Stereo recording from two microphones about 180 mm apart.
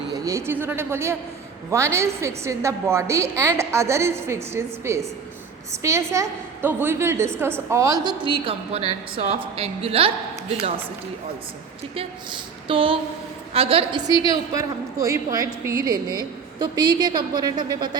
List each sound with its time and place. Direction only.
0.1 s a woman's voice: 15° right (ahead or behind); by 10.1 s 30° right (ahead or behind)
11.9 s a woman's voice: 30° right (ahead or behind)
14.3 s a woman's voice: 20° right (ahead or behind)